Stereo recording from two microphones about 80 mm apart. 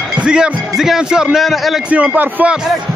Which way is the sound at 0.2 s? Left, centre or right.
Centre.